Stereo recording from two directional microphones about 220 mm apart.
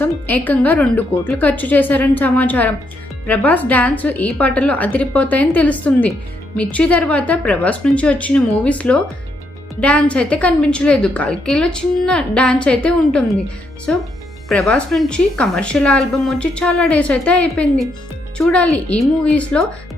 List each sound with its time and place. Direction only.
0.0 s a woman's voice: 5° left (ahead or behind)